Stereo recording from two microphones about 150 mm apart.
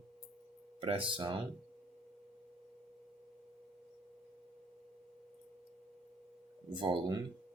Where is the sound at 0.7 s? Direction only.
35° right (ahead or behind).